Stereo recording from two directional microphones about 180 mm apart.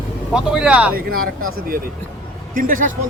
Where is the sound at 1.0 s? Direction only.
55° right (ahead or behind).